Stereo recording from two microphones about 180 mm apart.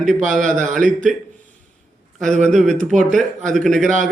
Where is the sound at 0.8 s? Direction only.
45° right (ahead or behind).